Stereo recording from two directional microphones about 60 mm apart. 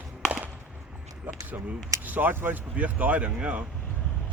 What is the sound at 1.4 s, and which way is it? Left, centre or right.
Speech, right.